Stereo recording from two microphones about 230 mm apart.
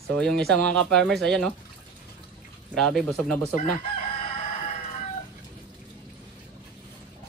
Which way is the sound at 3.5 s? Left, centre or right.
Left.